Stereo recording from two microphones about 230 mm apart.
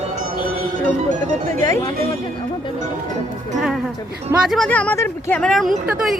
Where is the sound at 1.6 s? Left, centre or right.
Centre.